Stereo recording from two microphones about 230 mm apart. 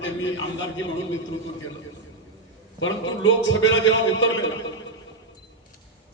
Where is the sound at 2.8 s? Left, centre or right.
Left.